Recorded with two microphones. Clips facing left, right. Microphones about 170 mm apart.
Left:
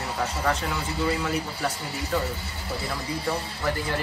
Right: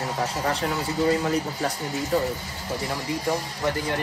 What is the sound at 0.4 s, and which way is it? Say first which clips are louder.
Speech: even; 35° right (ahead or behind).